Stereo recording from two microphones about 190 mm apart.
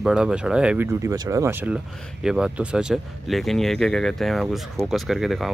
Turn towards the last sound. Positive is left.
turn(degrees=0)  # may be behind; listen again after turning